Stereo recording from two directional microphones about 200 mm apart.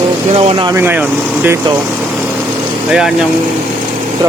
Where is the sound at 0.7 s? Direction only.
10° right (ahead or behind).